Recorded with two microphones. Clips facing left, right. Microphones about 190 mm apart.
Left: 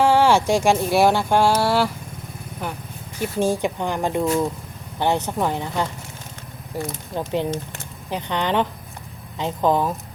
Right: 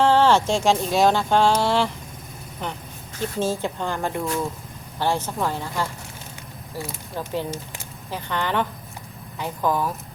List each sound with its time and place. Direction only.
0.0 s speech: 10° left (ahead or behind)
3.2 s speech: 15° left (ahead or behind)